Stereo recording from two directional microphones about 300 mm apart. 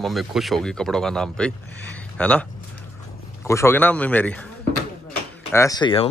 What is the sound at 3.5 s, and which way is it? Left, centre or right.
Speech, centre.